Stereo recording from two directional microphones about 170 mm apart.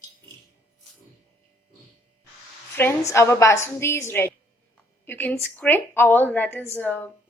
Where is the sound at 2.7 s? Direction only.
15° left (ahead or behind).